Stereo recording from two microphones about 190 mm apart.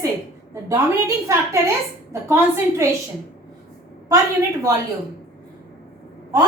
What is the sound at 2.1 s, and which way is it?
Speech, 15° right (ahead or behind).